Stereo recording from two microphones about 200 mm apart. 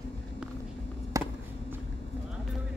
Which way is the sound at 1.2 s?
15° right (ahead or behind).